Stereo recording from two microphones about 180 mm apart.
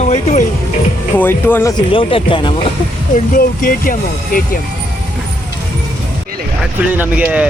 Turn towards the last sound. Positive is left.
turn(degrees=-10)  # may be behind; listen again after turning